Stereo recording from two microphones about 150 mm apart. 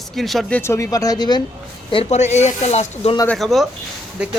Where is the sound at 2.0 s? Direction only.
50° left (ahead or behind).